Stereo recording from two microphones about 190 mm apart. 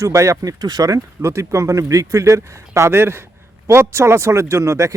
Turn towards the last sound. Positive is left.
turn(degrees=-15)  # may be behind; listen again after turning